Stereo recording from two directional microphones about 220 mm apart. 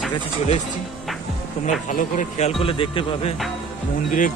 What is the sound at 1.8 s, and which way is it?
Speech, 35° left (ahead or behind).